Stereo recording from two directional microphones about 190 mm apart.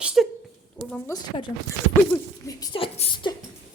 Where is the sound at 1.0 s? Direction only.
20° left (ahead or behind).